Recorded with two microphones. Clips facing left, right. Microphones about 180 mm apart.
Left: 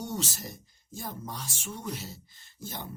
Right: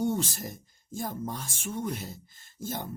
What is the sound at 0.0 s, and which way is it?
Speech, 50° right (ahead or behind).